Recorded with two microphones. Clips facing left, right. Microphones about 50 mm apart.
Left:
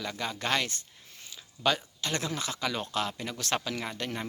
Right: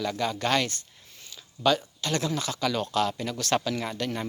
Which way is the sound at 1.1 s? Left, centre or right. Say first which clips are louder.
Even; left.